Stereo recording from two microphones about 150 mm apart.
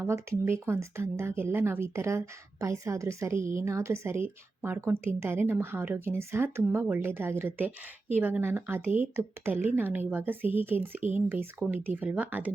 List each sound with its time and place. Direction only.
0.0 s speech: 15° right (ahead or behind)